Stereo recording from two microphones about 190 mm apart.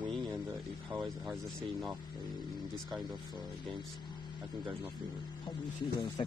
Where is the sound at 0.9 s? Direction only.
Centre (ahead or behind).